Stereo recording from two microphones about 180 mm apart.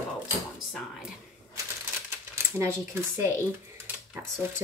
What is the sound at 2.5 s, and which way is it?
Speech, 15° right (ahead or behind).